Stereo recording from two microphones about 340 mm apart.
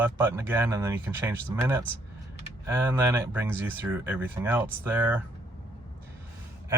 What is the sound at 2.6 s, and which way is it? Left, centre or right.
Speech, centre.